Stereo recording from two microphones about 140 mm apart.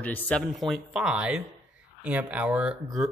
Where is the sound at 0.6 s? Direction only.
5° right (ahead or behind).